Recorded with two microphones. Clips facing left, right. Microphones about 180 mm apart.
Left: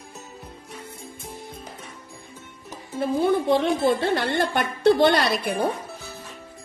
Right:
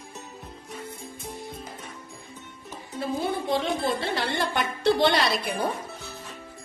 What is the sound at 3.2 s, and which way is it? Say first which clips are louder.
A woman's voice: left 7 dB; 55° left (ahead or behind).